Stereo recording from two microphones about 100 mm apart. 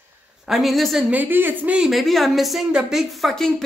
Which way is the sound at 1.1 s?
20° right (ahead or behind).